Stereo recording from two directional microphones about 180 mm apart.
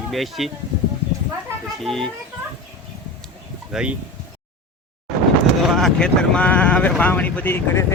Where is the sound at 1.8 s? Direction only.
5° left (ahead or behind).